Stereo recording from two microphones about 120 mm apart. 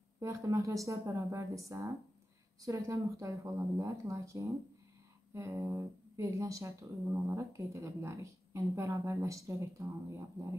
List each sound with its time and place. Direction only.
0.2 s speech: 25° right (ahead or behind)